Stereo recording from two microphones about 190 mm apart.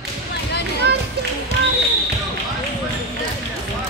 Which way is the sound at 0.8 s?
60° right (ahead or behind).